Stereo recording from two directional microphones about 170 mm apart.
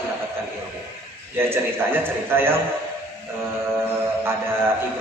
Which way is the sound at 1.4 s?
15° right (ahead or behind).